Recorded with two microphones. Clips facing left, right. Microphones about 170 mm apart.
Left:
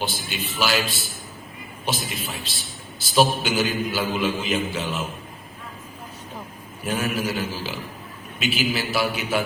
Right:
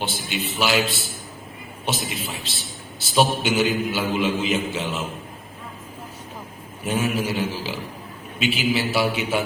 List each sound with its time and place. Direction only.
0.0 s a man's voice: 25° right (ahead or behind)
1.8 s a man's voice: 25° right (ahead or behind)
6.8 s a man's voice: 25° right (ahead or behind)